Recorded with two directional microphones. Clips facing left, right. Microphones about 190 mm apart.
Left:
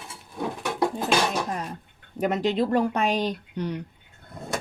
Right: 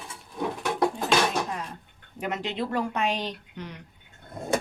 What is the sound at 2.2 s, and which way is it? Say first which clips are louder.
Speech: left 7 dB; 40° left (ahead or behind).